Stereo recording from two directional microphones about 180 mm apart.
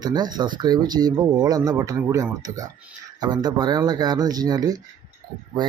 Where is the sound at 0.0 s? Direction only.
20° right (ahead or behind).